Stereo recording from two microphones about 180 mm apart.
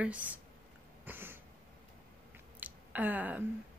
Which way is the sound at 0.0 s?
10° right (ahead or behind).